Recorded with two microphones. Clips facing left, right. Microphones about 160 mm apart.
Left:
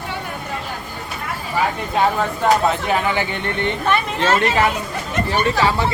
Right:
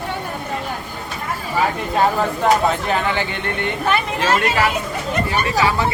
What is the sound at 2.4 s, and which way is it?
Speech, centre (ahead or behind).